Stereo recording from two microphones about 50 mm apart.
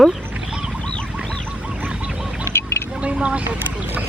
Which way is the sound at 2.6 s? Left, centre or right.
Left.